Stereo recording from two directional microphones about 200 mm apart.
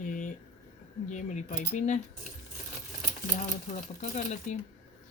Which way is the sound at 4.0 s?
35° left (ahead or behind).